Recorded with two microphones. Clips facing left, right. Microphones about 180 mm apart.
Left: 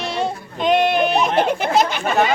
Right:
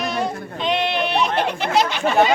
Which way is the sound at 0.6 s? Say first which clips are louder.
Left 5 dB; 45° left (ahead or behind).